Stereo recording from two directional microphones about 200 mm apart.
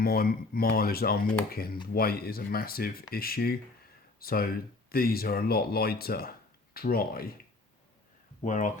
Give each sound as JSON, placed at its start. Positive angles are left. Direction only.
{"t": 0.0, "sound": "speech", "side_deg": 50}
{"t": 8.4, "sound": "speech", "side_deg": 40}